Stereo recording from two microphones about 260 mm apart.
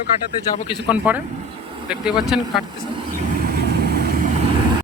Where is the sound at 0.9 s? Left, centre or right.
Centre.